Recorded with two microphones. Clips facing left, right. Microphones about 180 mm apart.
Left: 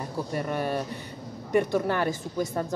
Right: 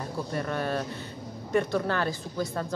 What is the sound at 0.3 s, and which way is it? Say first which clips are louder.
Speech: left 1 dB; 15° left (ahead or behind).